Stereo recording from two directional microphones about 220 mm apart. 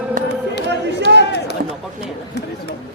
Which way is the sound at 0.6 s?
50° right (ahead or behind).